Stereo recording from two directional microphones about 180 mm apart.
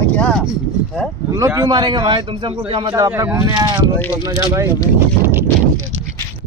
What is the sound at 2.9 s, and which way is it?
A man's voice, 20° right (ahead or behind).